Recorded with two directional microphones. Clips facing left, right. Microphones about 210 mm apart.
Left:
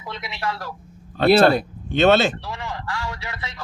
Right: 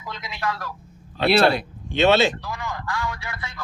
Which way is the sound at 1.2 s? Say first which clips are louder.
Left 3 dB; 45° left (ahead or behind).